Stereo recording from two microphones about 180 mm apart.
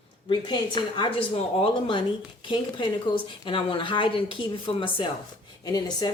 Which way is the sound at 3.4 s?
30° left (ahead or behind).